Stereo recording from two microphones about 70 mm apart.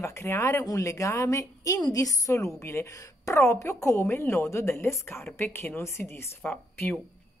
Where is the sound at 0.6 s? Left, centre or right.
Left.